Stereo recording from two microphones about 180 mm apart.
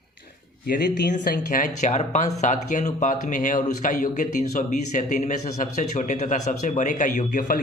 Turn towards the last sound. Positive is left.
turn(degrees=50)  # may be behind; listen again after turning